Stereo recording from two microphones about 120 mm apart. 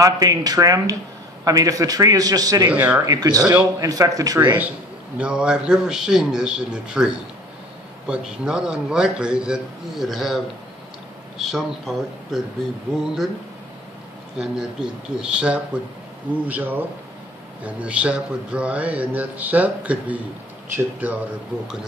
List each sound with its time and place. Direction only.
0.0 s a man's voice: 30° right (ahead or behind)
2.7 s speech: 10° right (ahead or behind)
3.1 s a man's voice: 30° right (ahead or behind)
5.1 s speech: 10° right (ahead or behind)
8.1 s speech: 5° right (ahead or behind)
14.4 s speech: 5° right (ahead or behind)